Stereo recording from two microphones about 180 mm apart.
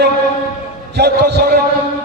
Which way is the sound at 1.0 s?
65° right (ahead or behind).